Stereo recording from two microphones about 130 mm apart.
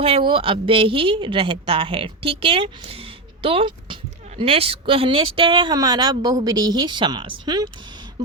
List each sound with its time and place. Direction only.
0.0 s speech: 40° right (ahead or behind)